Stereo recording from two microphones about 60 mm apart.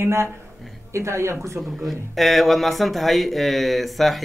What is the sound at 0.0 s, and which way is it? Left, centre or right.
Speech, right.